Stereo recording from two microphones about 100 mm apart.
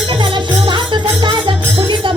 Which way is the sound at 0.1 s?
55° right (ahead or behind).